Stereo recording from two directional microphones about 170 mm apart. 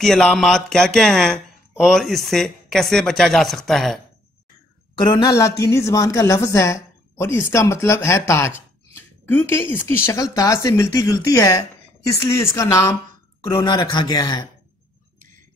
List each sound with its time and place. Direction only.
0.0 s speech: centre (ahead or behind)
4.9 s a woman's voice: 25° left (ahead or behind)